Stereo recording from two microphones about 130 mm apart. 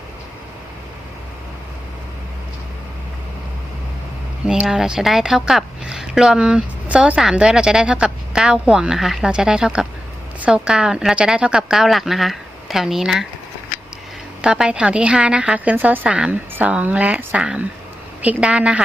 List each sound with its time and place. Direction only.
4.4 s a woman's voice: 5° right (ahead or behind)
14.4 s a woman's voice: 5° right (ahead or behind)